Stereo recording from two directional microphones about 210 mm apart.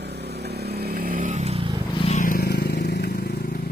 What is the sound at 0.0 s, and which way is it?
Vehicle, 50° right (ahead or behind).